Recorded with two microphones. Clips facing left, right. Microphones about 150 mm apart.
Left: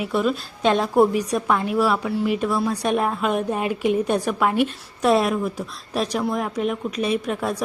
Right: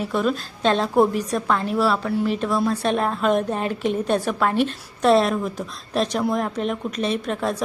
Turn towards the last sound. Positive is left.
turn(degrees=10)  # may be behind; listen again after turning